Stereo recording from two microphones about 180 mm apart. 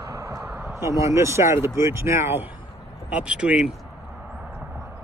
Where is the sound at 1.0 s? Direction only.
15° right (ahead or behind).